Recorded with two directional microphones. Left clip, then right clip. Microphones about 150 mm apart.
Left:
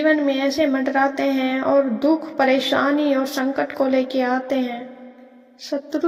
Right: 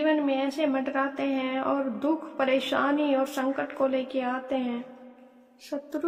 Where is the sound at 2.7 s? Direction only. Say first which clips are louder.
Left 6 dB; 40° left (ahead or behind).